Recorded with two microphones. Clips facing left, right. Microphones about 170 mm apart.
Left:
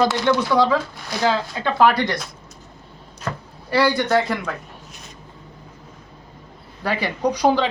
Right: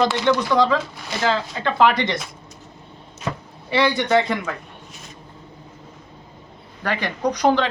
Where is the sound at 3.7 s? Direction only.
Centre (ahead or behind).